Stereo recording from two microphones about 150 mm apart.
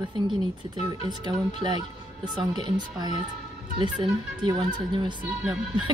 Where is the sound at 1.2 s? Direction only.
30° right (ahead or behind).